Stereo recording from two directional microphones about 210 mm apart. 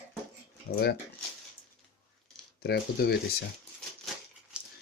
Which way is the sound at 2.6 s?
50° left (ahead or behind).